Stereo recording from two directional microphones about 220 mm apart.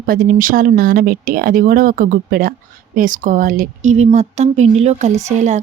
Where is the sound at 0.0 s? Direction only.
40° right (ahead or behind).